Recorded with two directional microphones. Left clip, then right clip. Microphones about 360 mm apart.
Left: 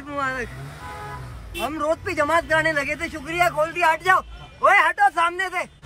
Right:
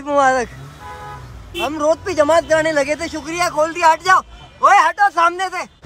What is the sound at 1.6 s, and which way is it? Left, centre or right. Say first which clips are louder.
Speech: right 6 dB; centre.